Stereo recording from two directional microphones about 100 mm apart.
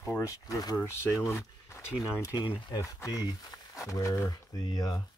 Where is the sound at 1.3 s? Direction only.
30° left (ahead or behind).